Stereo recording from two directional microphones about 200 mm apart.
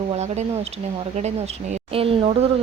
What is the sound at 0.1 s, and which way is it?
Speech, 30° right (ahead or behind).